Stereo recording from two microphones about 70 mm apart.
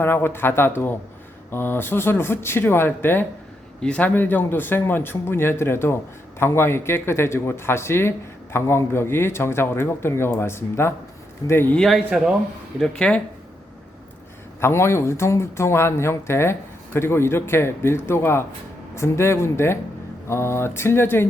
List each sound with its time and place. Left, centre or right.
0.0 s speech: left
3.8 s speech: centre
4.1 s speech: left
11.8 s a man's voice: centre
12.8 s speech: centre
14.6 s speech: left